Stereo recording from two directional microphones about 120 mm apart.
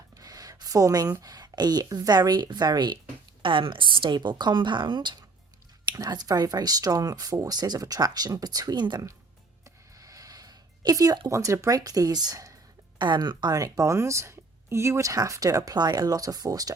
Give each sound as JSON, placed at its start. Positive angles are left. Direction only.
{"t": 0.1, "sound": "speech", "side_deg": -30}
{"t": 9.6, "sound": "a sound", "side_deg": -30}
{"t": 11.3, "sound": "a woman's voice", "side_deg": -25}